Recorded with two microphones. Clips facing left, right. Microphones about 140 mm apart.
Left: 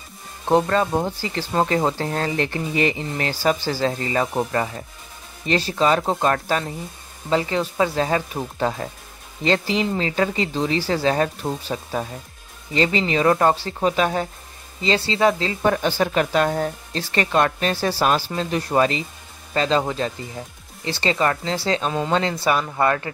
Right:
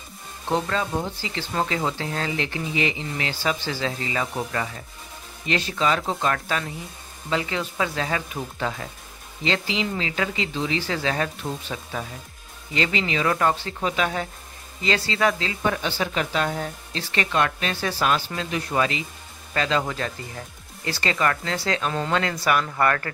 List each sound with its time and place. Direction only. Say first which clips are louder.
0.5 s speech: left 6 dB; 50° left (ahead or behind)
14.8 s speech: left 4 dB; 30° left (ahead or behind)